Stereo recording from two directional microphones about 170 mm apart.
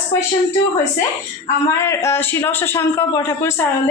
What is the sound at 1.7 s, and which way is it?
A woman's voice, 15° left (ahead or behind).